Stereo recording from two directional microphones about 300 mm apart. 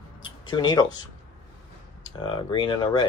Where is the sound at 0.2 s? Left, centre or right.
Centre.